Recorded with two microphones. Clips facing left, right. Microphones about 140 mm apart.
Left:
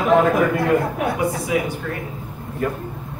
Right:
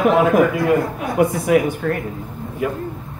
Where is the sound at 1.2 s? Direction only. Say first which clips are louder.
Right 6 dB; 55° right (ahead or behind).